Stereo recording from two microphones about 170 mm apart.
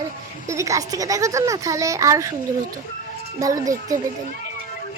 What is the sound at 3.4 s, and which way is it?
Speech, 20° right (ahead or behind).